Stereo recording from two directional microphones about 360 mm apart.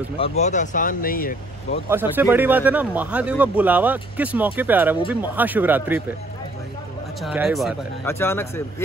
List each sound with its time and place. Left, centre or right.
0.4 s speech: centre
1.9 s speech: centre
7.2 s speech: centre